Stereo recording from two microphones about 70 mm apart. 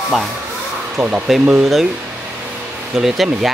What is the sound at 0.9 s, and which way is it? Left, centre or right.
Speech, right.